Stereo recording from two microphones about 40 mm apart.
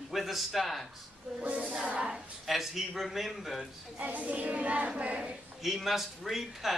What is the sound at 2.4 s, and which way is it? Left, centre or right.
Speech, centre.